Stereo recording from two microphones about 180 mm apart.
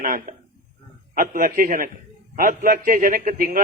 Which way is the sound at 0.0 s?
50° right (ahead or behind).